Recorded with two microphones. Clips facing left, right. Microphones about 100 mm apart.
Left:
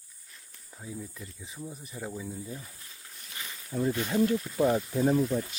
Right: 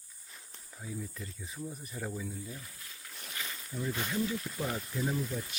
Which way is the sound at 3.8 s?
45° left (ahead or behind).